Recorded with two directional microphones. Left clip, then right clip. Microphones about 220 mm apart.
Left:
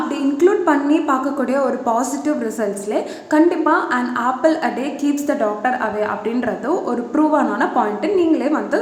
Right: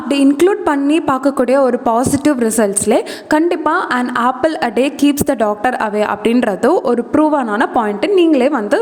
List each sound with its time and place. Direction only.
0.1 s a woman's voice: 45° right (ahead or behind)